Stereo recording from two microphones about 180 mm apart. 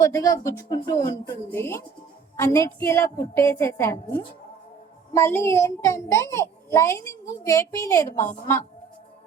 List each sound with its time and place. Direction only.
0.0 s a child's voice: 20° left (ahead or behind)